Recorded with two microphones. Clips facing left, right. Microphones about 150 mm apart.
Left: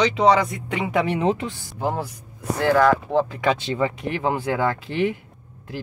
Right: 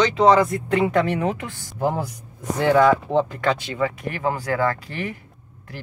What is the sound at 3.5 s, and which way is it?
Speech, 25° left (ahead or behind).